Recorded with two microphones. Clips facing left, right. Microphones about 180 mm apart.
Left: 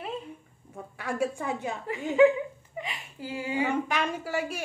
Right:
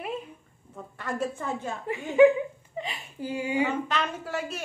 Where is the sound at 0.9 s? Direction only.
10° left (ahead or behind).